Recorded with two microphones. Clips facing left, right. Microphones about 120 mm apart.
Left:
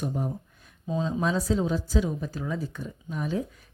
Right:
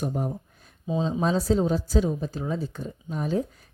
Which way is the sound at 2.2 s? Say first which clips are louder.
Right 2 dB; 25° right (ahead or behind).